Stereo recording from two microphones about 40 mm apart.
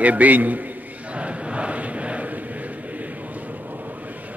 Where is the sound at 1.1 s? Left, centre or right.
Right.